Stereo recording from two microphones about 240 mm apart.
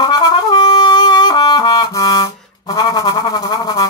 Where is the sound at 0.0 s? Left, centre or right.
Centre.